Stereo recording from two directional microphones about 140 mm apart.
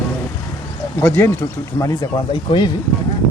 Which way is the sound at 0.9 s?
15° left (ahead or behind).